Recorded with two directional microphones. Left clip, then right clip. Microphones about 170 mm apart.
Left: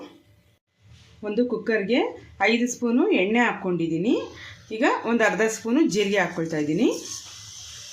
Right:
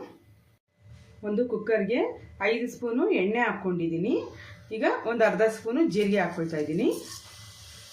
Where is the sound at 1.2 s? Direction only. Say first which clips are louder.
Left 3 dB; 60° left (ahead or behind).